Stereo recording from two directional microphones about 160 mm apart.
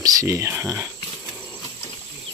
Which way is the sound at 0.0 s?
20° right (ahead or behind).